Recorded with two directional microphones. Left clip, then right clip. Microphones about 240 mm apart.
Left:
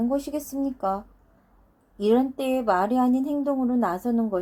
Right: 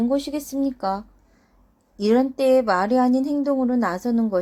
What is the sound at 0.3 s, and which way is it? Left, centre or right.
A woman's voice, right.